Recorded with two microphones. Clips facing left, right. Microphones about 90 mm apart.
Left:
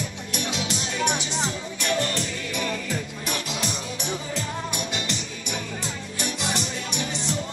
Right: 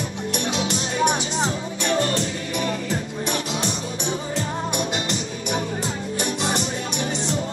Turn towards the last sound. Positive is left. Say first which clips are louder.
# right 4 dB
turn(degrees=-35)  # may be behind; listen again after turning